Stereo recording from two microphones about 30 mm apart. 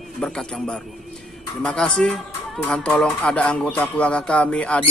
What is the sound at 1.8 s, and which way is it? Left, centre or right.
Speech, left.